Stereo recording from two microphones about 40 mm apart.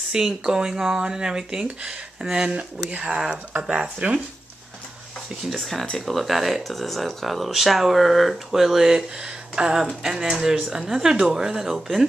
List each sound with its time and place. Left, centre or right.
0.1 s speech: centre
5.5 s speech: centre